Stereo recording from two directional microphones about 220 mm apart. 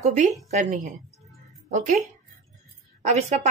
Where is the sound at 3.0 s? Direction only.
30° right (ahead or behind).